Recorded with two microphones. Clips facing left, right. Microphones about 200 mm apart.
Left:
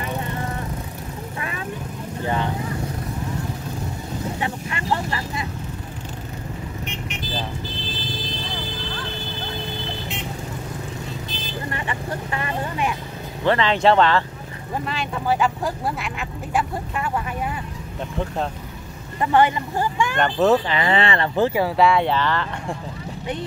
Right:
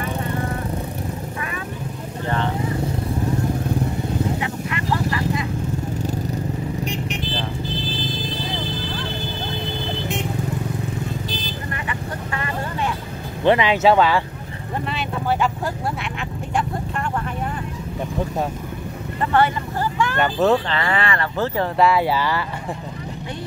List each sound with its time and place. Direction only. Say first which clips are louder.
2.2 s vehicle: even; 15° left (ahead or behind)
4.4 s vehicle: right 2 dB; 30° left (ahead or behind)
6.8 s vehicle: right 6 dB; 35° right (ahead or behind)
13.4 s speech: right 3 dB; 15° right (ahead or behind); by 17.1 s centre (ahead or behind)
19.3 s speech: left 1 dB; 15° left (ahead or behind)
20.2 s speech: left 1 dB; centre (ahead or behind)
20.6 s speech: left 2 dB; 20° left (ahead or behind)
21.5 s speech: right 3 dB; centre (ahead or behind)